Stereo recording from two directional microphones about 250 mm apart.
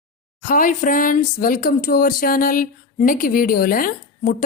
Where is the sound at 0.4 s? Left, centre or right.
Left.